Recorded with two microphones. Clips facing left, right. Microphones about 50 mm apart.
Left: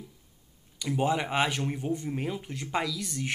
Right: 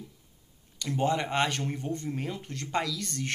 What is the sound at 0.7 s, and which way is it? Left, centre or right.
Speech, centre.